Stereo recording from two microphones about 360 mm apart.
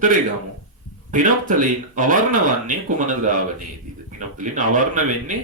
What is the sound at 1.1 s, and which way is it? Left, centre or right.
Speech, right.